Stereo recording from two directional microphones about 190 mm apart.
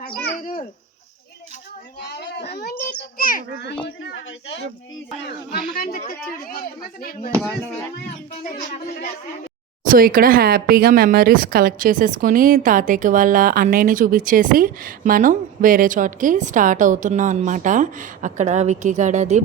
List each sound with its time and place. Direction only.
0.4 s a child's voice: 35° left (ahead or behind)
2.0 s a child's voice: 60° left (ahead or behind)
3.2 s speech: 50° left (ahead or behind)
5.5 s speech: 50° left (ahead or behind)
7.3 s speech: 15° right (ahead or behind)
7.9 s speech: 55° left (ahead or behind)
9.9 s speech: 50° right (ahead or behind)